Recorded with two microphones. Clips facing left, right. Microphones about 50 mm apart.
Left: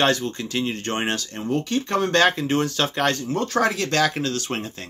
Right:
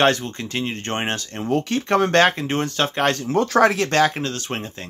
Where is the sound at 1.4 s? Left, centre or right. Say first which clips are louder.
Right 3 dB; right.